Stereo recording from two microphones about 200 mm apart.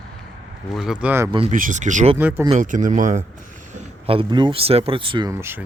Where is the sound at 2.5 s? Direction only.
40° right (ahead or behind); by 5.3 s 25° right (ahead or behind).